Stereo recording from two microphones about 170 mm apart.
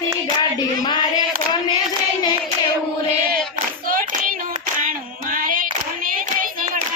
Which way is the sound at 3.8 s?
55° right (ahead or behind).